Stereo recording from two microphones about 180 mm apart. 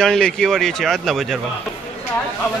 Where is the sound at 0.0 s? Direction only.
5° left (ahead or behind).